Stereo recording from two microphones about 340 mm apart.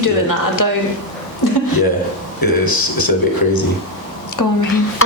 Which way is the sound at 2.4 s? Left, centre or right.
Left.